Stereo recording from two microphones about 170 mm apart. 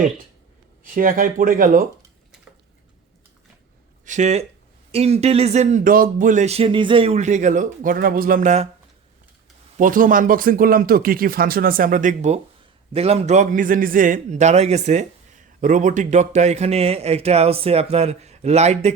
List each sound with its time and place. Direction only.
0.9 s speech: 55° right (ahead or behind)
4.0 s speech: 45° right (ahead or behind)
9.7 s speech: 50° right (ahead or behind)